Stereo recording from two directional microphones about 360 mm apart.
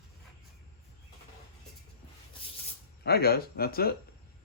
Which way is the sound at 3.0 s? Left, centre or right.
Left.